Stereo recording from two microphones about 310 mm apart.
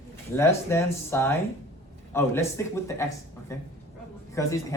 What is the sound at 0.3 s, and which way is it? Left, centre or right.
Speech, centre.